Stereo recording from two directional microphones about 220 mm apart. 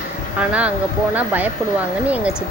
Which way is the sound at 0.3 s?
5° right (ahead or behind).